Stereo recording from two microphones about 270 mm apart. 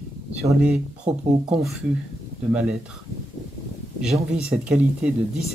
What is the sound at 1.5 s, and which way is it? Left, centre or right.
Speech, centre.